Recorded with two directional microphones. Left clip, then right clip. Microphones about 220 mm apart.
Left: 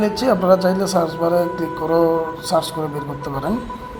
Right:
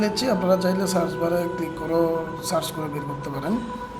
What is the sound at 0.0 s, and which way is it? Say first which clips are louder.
Speech: left 6 dB; 5° left (ahead or behind).